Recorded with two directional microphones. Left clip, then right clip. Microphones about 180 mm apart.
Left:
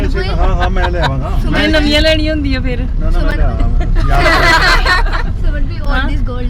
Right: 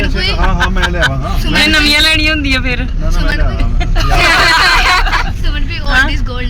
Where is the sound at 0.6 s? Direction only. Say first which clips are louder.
Right 1 dB; 15° left (ahead or behind).